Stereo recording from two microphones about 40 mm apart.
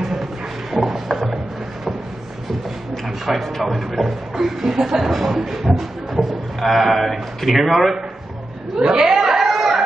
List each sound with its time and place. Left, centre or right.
0.0 s music: centre
2.9 s speech: centre
8.8 s speech: right
9.1 s a sound: centre